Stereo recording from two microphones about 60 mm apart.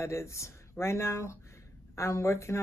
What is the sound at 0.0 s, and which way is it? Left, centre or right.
Speech, left.